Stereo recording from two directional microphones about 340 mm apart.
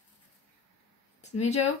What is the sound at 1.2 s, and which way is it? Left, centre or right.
Speech, centre.